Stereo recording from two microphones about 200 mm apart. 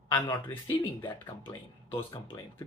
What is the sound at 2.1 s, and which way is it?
Speech, 25° left (ahead or behind).